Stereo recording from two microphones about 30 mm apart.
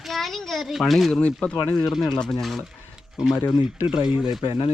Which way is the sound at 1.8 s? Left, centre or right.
Centre.